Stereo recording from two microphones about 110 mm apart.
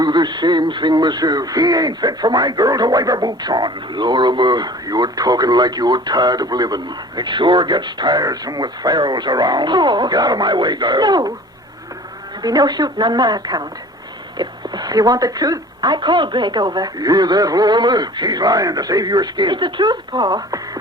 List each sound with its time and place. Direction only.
0.0 s speech: 40° right (ahead or behind)
12.4 s speech: 35° right (ahead or behind)